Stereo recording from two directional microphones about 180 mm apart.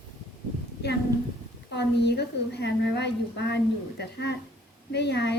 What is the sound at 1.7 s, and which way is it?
A woman's voice, 70° left (ahead or behind).